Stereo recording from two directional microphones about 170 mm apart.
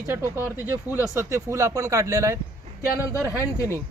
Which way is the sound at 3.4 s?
15° left (ahead or behind).